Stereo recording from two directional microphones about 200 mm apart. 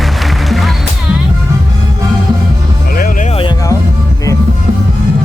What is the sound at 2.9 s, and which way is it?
Music, 45° left (ahead or behind).